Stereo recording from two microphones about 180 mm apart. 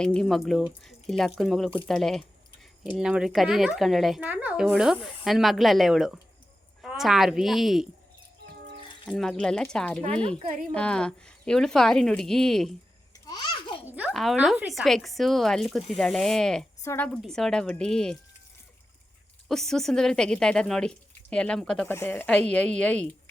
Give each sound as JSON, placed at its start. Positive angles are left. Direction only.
{"t": 0.0, "sound": "speech", "side_deg": 5}
{"t": 9.0, "sound": "speech", "side_deg": 0}
{"t": 13.1, "sound": "babbling", "side_deg": 20}
{"t": 13.8, "sound": "speech", "side_deg": -10}
{"t": 16.8, "sound": "a woman's voice", "side_deg": 15}
{"t": 17.1, "sound": "speech", "side_deg": 5}
{"t": 19.5, "sound": "speech", "side_deg": 0}